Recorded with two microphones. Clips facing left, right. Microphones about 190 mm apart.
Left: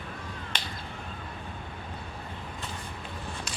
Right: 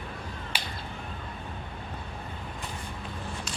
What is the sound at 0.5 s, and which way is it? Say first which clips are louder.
Whip: right 1 dB; 10° right (ahead or behind).